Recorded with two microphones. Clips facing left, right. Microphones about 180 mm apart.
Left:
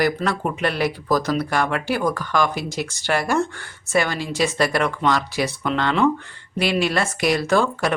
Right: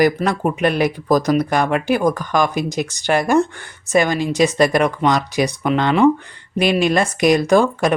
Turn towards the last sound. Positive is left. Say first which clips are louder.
# right 5 dB
turn(degrees=-15)  # may be behind; listen again after turning